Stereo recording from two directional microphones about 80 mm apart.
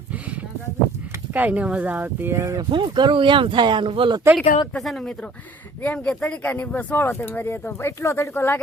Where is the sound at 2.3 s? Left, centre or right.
Right.